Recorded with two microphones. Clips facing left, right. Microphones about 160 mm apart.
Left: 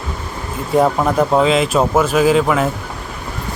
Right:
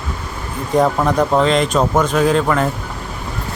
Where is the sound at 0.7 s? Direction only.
5° left (ahead or behind).